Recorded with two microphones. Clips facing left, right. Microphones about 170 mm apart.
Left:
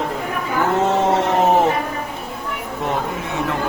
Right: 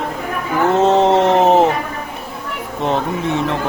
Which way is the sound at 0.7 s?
20° right (ahead or behind).